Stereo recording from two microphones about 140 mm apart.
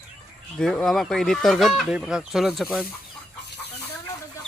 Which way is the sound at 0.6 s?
5° left (ahead or behind).